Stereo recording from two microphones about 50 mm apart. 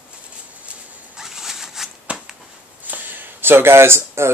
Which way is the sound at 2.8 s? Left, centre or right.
Right.